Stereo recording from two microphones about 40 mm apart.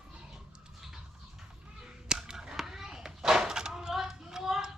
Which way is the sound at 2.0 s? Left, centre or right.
Centre.